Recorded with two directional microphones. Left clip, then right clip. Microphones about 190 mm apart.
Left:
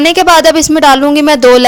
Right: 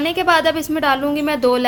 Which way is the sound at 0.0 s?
45° left (ahead or behind).